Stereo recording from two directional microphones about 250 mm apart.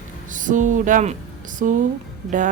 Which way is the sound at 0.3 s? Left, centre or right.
Right.